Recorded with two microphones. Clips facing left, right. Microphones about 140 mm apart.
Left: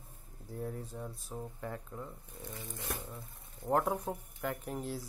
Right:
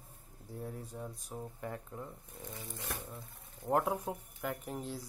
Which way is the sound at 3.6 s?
5° right (ahead or behind).